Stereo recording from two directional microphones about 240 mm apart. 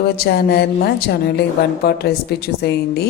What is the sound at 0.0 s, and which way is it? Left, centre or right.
A woman's voice, left.